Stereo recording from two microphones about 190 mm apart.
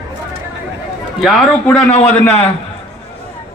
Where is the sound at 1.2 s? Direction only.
Centre (ahead or behind).